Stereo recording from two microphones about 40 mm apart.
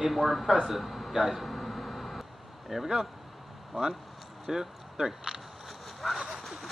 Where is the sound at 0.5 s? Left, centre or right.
Centre.